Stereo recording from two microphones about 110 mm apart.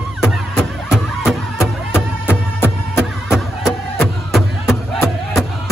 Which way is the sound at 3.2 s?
Centre (ahead or behind).